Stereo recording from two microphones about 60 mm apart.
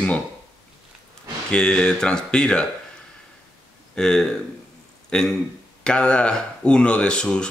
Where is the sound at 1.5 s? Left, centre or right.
Centre.